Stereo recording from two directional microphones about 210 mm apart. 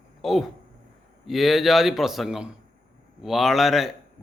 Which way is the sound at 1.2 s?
Centre (ahead or behind).